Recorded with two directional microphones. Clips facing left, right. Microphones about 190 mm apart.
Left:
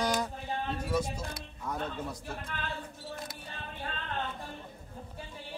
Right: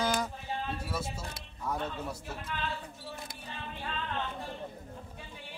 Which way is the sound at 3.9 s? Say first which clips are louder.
Right 3 dB; 45° left (ahead or behind).